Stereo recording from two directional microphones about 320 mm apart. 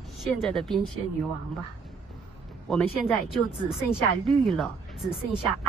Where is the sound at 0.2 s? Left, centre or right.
Centre.